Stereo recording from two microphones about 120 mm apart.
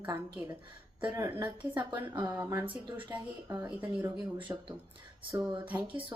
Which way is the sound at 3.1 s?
20° right (ahead or behind).